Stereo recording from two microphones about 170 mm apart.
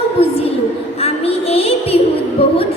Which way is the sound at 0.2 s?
35° left (ahead or behind).